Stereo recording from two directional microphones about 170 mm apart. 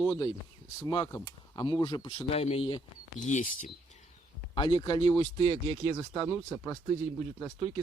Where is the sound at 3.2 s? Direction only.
45° left (ahead or behind).